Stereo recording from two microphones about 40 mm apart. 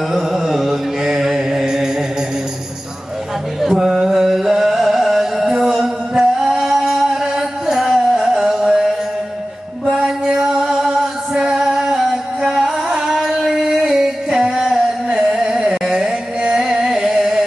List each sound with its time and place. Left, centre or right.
0.1 s mantra: centre
3.6 s music: centre
6.1 s music: centre
9.9 s music: centre
15.1 s carnatic music: centre